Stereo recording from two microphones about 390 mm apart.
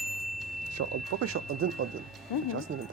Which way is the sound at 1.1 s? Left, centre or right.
Right.